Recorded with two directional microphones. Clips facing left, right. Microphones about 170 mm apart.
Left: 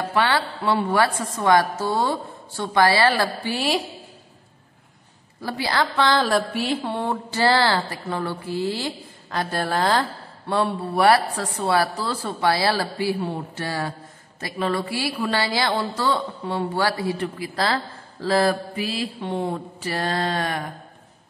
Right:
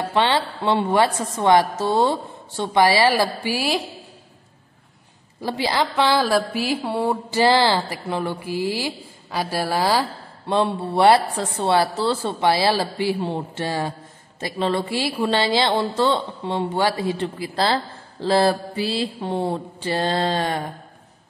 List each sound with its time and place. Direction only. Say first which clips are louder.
0.0 s a woman's voice: right 2 dB; 25° right (ahead or behind); by 3.8 s 5° right (ahead or behind)
5.4 s a woman's voice: right 2 dB; 20° right (ahead or behind)
10.5 s a woman's voice: right 2 dB; 25° right (ahead or behind)